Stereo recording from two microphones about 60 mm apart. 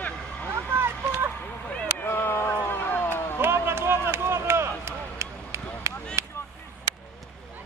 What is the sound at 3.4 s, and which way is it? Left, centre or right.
Run, right.